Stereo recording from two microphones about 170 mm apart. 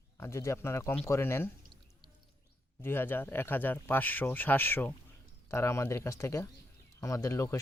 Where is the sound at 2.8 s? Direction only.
15° left (ahead or behind).